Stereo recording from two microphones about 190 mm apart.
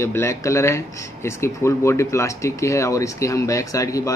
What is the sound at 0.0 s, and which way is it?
Speech, 15° left (ahead or behind).